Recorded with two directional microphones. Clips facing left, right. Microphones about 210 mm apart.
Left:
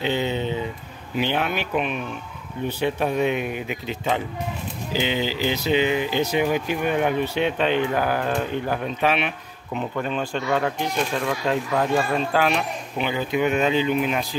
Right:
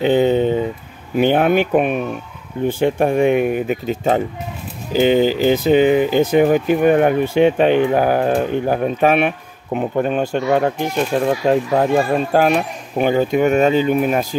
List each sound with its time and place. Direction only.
0.0 s speech: 50° right (ahead or behind)